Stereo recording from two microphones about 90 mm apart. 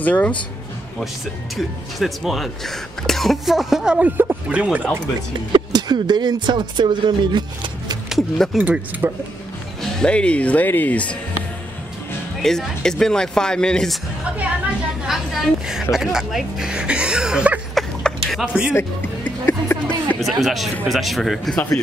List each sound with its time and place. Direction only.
0.0 s speech: 15° left (ahead or behind)
2.0 s speech: centre (ahead or behind); by 4.6 s 20° right (ahead or behind)
5.5 s speech: 55° right (ahead or behind)
8.1 s speech: 5° left (ahead or behind)
8.5 s speech: 15° right (ahead or behind)
9.8 s speech: 10° left (ahead or behind)
12.4 s speech: 5° left (ahead or behind)
15.0 s a woman's voice: 5° right (ahead or behind)
17.7 s a sound: centre (ahead or behind)
18.4 s speech: 10° right (ahead or behind)
18.7 s speech: 20° left (ahead or behind)
20.2 s speech: centre (ahead or behind)